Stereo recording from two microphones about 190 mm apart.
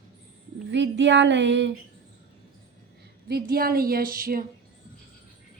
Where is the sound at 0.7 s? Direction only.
70° right (ahead or behind).